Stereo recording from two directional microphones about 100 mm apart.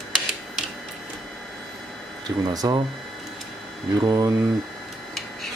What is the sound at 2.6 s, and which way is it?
Speech, 35° right (ahead or behind).